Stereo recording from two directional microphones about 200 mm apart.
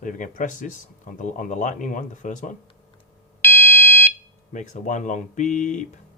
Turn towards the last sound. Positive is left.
turn(degrees=40)  # may be behind; listen again after turning